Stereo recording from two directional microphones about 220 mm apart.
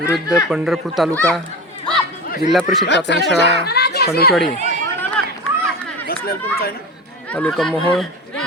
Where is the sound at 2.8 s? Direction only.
55° left (ahead or behind).